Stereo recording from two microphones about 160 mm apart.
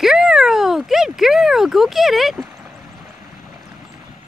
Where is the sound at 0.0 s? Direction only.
5° right (ahead or behind).